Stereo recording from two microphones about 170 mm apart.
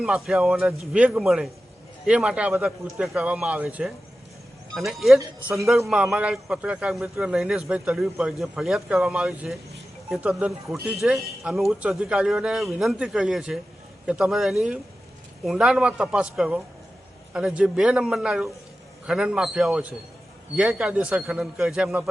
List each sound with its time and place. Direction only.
0.0 s speech: 5° right (ahead or behind)